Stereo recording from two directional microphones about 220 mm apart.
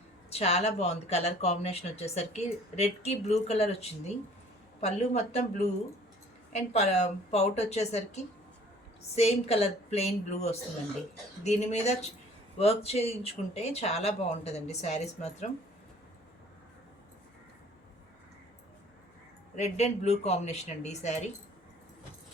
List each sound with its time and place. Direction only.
0.3 s a woman's voice: 30° left (ahead or behind)
19.5 s speech: 30° left (ahead or behind)